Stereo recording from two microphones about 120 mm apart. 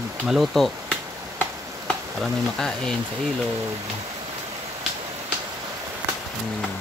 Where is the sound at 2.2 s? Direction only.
5° left (ahead or behind).